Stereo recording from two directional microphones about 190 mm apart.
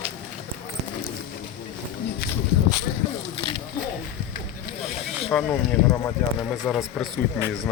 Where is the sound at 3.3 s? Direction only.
25° left (ahead or behind).